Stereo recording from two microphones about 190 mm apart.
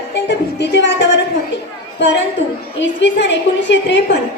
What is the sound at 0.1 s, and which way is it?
A woman's voice, 65° left (ahead or behind).